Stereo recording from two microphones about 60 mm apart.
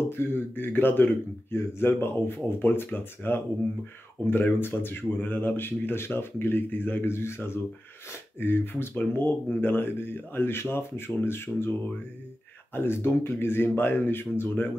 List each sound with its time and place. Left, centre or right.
0.1 s speech: left
12.7 s speech: left